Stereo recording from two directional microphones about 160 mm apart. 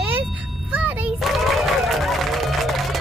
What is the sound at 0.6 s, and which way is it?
Music, 10° right (ahead or behind).